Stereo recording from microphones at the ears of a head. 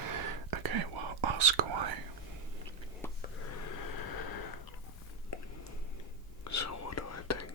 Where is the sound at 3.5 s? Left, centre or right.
Left.